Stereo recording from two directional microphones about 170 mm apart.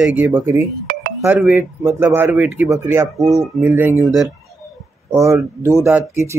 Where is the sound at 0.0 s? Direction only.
10° right (ahead or behind).